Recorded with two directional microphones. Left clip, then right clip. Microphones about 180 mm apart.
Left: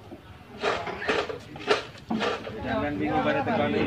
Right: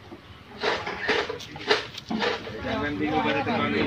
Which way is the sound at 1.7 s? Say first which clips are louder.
Right 1 dB; 20° left (ahead or behind).